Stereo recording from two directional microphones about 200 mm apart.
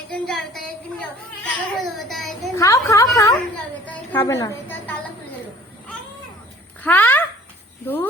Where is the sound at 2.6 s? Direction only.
15° left (ahead or behind).